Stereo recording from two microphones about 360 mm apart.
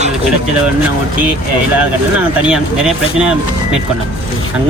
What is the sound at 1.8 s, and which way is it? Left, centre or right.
Speech, centre.